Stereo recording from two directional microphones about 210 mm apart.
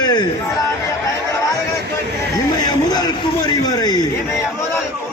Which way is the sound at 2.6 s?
20° left (ahead or behind).